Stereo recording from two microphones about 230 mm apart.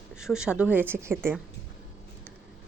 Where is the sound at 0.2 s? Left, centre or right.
Centre.